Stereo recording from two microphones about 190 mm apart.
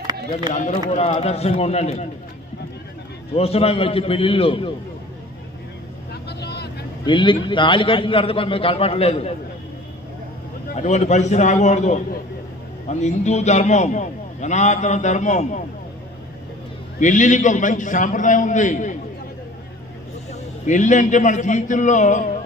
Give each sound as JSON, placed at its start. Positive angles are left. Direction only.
{"t": 0.9, "sound": "a man's voice", "side_deg": 35}
{"t": 3.3, "sound": "a man's voice", "side_deg": 30}
{"t": 6.2, "sound": "vehicle", "side_deg": 60}
{"t": 7.0, "sound": "a man's voice", "side_deg": 25}
{"t": 10.8, "sound": "a man's voice", "side_deg": 35}
{"t": 17.0, "sound": "a man's voice", "side_deg": 40}
{"t": 20.3, "sound": "a man's voice", "side_deg": 40}